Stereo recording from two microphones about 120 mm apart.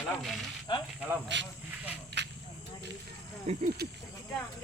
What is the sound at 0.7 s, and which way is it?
Speech, 40° left (ahead or behind).